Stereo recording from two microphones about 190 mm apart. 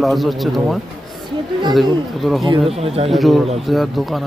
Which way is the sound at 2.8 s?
30° right (ahead or behind).